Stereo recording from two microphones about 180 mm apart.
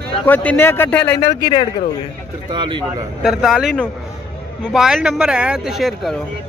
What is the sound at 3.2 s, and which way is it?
Speech, centre (ahead or behind).